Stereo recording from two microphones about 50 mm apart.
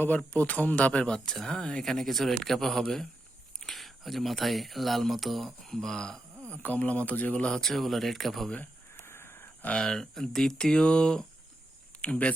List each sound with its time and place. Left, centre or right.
0.3 s speech: left
1.0 s speech: centre
6.5 s a man's voice: left
7.6 s speech: centre
9.0 s wheeze: left
9.8 s speech: centre
12.0 s a man's voice: left